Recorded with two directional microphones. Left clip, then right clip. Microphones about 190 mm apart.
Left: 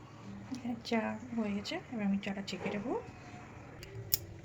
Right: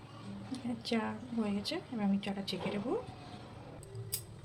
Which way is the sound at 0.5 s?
Centre (ahead or behind).